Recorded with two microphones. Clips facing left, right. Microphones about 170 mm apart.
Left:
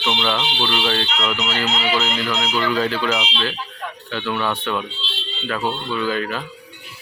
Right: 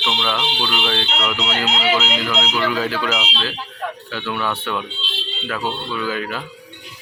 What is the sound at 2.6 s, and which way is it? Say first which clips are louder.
Speech: left 3 dB; 5° right (ahead or behind).